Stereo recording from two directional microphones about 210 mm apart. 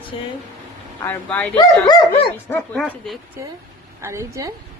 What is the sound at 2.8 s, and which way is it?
A woman's voice, 5° right (ahead or behind).